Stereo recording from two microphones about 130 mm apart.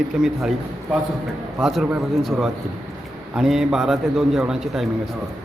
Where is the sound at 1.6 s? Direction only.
Centre (ahead or behind).